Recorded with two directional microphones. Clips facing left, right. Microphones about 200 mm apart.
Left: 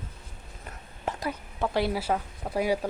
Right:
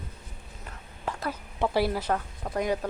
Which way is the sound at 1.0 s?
20° left (ahead or behind).